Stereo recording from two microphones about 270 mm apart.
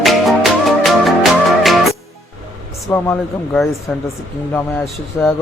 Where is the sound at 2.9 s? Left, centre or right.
Centre.